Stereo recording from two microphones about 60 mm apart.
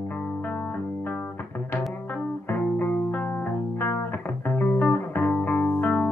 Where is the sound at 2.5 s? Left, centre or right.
Left.